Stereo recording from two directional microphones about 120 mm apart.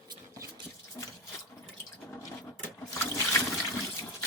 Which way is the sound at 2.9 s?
20° left (ahead or behind).